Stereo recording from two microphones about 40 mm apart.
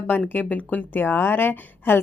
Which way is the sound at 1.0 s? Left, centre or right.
Left.